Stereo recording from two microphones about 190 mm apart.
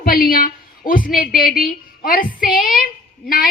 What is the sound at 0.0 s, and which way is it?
A woman's voice, 50° left (ahead or behind).